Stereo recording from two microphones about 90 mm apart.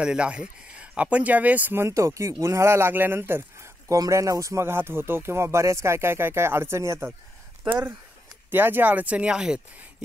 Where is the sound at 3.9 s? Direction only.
40° right (ahead or behind).